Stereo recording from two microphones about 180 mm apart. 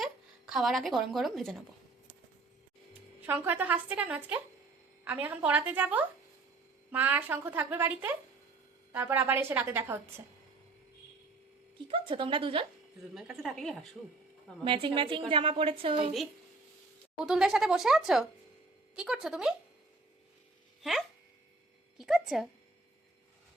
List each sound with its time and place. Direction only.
0.0 s speech: centre (ahead or behind)
3.2 s a woman's voice: 10° right (ahead or behind)
11.9 s a woman's voice: 30° right (ahead or behind)
13.1 s speech: centre (ahead or behind)
14.6 s a woman's voice: 30° right (ahead or behind)
17.2 s speech: 5° right (ahead or behind)
21.9 s speech: centre (ahead or behind)